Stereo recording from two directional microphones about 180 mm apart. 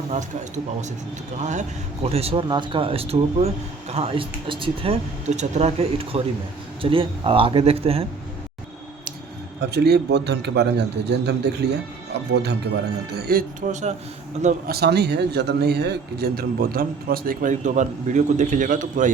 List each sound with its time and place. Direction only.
0.1 s speech: 40° right (ahead or behind)
2.0 s speech: 35° right (ahead or behind)
9.6 s a man's voice: 65° right (ahead or behind); by 13.9 s 45° right (ahead or behind)
14.7 s speech: 65° right (ahead or behind); by 19.1 s 45° right (ahead or behind)